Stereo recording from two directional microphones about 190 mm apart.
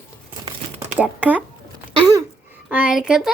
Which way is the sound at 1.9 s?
30° right (ahead or behind).